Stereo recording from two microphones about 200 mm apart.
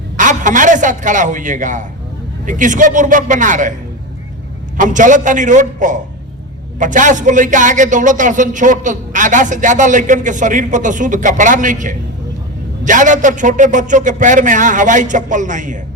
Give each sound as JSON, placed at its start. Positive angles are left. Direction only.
{"t": 0.2, "sound": "a man's voice", "side_deg": -40}
{"t": 4.8, "sound": "a man's voice", "side_deg": -40}